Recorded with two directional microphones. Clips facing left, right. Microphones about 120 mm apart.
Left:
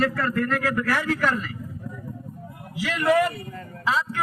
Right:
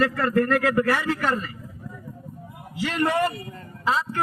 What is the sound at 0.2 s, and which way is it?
Speech, 45° right (ahead or behind).